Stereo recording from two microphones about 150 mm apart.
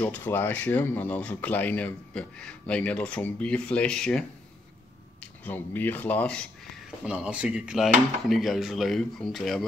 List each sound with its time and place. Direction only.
0.0 s speech: 15° left (ahead or behind)
7.1 s speech: 5° right (ahead or behind)